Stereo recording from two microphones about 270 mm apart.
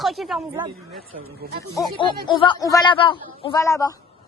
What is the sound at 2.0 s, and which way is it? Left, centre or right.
A man's voice, centre.